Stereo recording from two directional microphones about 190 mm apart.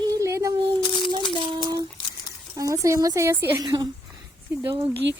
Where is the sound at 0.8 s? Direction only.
25° left (ahead or behind).